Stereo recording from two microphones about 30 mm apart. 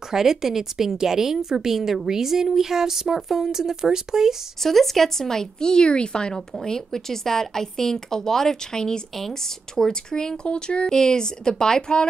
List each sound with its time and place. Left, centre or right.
0.1 s a woman's voice: centre
4.6 s a woman's voice: centre; by 6.4 s left
6.6 s a woman's voice: centre
9.1 s speech: centre; by 10.9 s left
10.9 s speech: left